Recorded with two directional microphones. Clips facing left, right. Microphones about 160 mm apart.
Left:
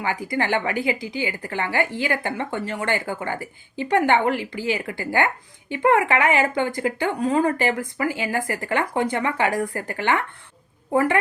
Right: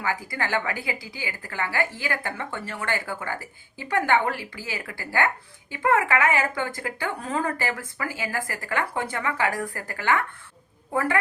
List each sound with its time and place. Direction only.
0.0 s a woman's voice: 20° left (ahead or behind)